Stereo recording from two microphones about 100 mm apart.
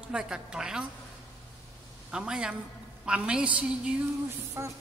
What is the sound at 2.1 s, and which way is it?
Speech, 10° right (ahead or behind).